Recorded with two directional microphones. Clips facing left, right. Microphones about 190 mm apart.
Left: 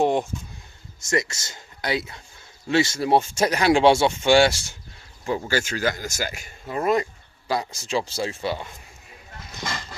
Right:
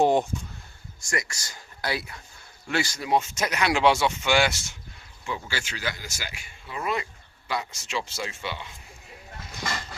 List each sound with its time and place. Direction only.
0.0 s speech: centre (ahead or behind)
1.0 s speech: 25° left (ahead or behind); by 8.7 s 40° left (ahead or behind)